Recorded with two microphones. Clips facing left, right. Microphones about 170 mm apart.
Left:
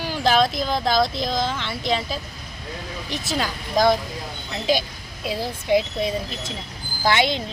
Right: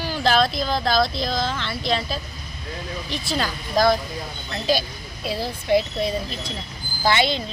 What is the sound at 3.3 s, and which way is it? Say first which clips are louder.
A woman's voice: even; 15° left (ahead or behind).